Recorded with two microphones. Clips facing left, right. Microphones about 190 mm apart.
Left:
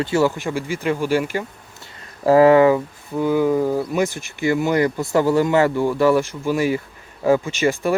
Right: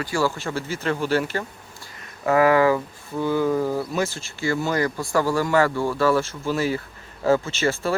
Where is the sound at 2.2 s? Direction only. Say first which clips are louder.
Left 5 dB; 30° left (ahead or behind).